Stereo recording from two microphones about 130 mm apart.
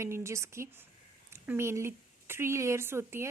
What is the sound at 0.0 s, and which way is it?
A woman's voice, 20° right (ahead or behind).